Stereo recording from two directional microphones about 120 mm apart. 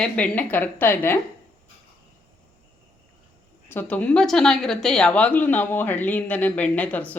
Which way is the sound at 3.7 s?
15° left (ahead or behind).